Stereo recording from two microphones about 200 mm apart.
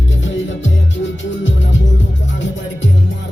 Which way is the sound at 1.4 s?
70° left (ahead or behind).